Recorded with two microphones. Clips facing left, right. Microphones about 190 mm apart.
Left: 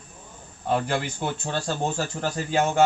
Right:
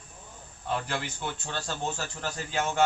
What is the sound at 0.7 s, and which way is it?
Speech, 45° left (ahead or behind).